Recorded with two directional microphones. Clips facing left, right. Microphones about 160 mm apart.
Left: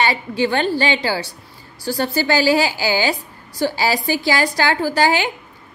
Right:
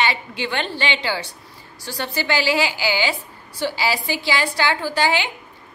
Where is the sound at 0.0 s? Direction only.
40° left (ahead or behind).